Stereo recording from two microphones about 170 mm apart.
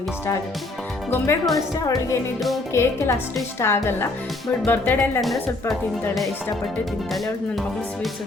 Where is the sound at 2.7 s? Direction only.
15° left (ahead or behind).